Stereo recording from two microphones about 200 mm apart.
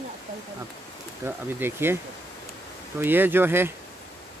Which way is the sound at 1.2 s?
10° right (ahead or behind).